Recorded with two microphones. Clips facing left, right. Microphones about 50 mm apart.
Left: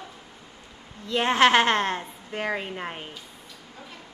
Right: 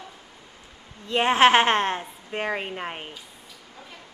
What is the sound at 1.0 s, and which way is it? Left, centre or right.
A woman's voice, right.